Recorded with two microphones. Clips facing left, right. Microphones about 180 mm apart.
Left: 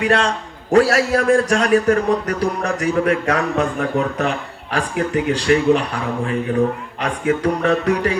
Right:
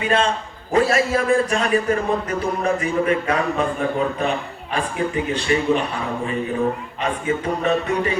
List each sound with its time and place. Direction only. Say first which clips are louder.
0.0 s a man's voice: left 2 dB; 75° left (ahead or behind)